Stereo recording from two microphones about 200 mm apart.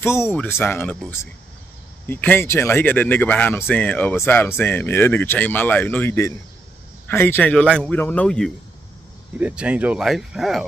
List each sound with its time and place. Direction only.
0.0 s speech: 15° left (ahead or behind)